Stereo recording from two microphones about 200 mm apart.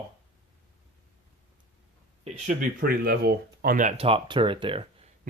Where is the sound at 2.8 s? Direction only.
50° right (ahead or behind); by 4.8 s 25° right (ahead or behind).